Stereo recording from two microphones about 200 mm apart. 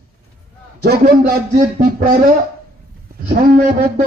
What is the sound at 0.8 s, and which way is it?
A man's voice, 50° right (ahead or behind).